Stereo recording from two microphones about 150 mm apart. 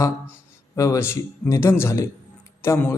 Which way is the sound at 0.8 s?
20° left (ahead or behind).